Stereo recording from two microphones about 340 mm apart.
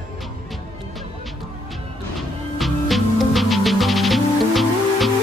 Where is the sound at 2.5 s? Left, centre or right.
Centre.